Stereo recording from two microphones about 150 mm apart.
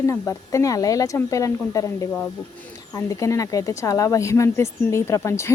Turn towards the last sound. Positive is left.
turn(degrees=20)  # may be behind; listen again after turning